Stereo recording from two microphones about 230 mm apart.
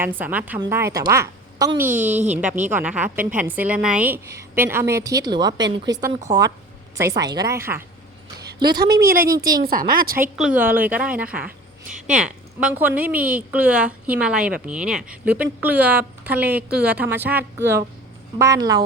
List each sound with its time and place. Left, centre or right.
0.0 s a woman's voice: centre
8.8 s speech: right
10.3 s a woman's voice: centre